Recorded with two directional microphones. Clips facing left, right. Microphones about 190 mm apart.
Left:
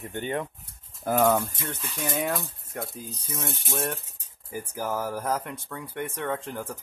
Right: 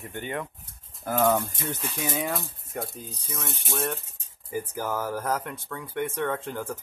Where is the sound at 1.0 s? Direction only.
10° left (ahead or behind).